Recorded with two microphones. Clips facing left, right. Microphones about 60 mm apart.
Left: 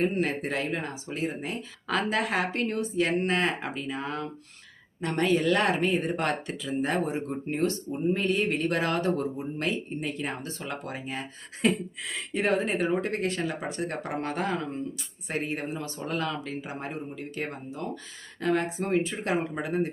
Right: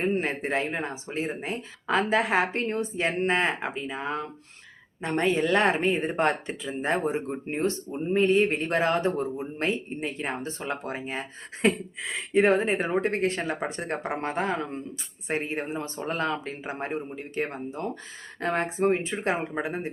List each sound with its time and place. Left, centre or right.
0.0 s speech: right